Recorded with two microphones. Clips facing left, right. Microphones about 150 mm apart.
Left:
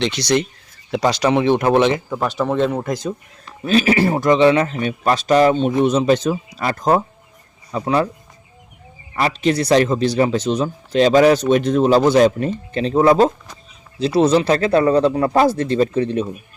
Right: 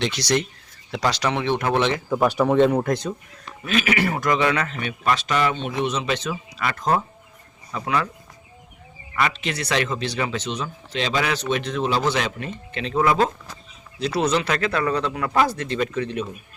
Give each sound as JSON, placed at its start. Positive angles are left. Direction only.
{"t": 0.0, "sound": "speech", "side_deg": -5}
{"t": 1.0, "sound": "speech", "side_deg": 20}
{"t": 2.0, "sound": "speech", "side_deg": -10}
{"t": 3.6, "sound": "speech", "side_deg": 35}
{"t": 9.1, "sound": "speech", "side_deg": 40}